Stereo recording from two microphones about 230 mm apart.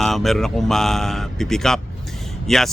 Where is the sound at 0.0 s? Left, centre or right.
Centre.